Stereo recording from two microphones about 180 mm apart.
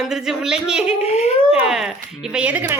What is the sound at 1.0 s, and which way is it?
Speech, 35° left (ahead or behind).